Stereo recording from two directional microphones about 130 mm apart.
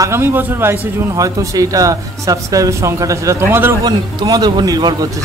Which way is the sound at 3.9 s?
30° right (ahead or behind).